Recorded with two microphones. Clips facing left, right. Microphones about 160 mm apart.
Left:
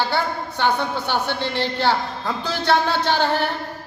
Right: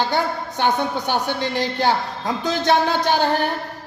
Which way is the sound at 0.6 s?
15° right (ahead or behind).